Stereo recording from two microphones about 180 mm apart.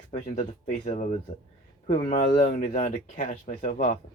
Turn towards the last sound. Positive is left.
turn(degrees=40)  # may be behind; listen again after turning